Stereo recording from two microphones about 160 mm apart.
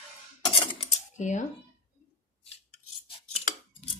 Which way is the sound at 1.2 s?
50° left (ahead or behind).